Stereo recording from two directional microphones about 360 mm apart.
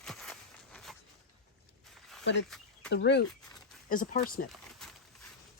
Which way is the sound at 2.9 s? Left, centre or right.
Left.